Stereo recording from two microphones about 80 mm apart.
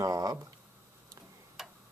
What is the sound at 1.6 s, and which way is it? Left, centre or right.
Clock, centre.